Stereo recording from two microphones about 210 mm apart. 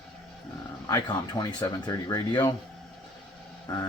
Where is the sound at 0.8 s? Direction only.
20° left (ahead or behind).